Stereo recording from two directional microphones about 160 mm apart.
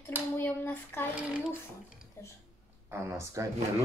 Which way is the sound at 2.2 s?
15° left (ahead or behind).